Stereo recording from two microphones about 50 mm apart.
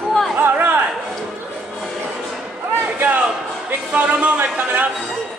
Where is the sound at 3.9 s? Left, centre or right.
Right.